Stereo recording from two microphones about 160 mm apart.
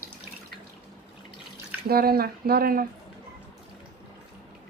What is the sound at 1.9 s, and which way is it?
Speech, 70° right (ahead or behind).